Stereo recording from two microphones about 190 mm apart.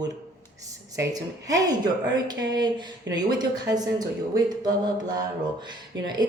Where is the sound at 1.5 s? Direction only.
20° right (ahead or behind).